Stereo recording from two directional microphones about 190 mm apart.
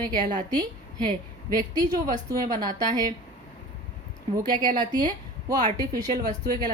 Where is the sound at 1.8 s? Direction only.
20° right (ahead or behind).